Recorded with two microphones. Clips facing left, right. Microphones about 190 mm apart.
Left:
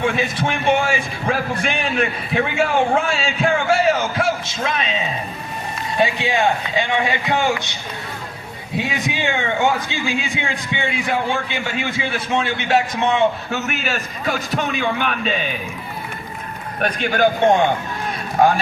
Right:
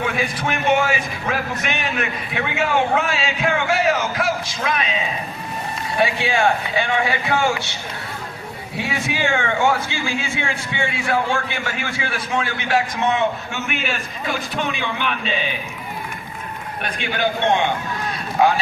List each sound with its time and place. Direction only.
0.0 s a man's voice: 30° left (ahead or behind)
6.0 s a man's voice: 20° left (ahead or behind)
13.5 s a man's voice: 40° left (ahead or behind)
16.8 s a man's voice: 45° left (ahead or behind)
18.4 s a man's voice: 50° left (ahead or behind)